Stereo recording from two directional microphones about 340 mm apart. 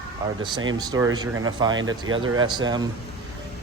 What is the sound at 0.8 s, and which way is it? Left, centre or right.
Speech, centre.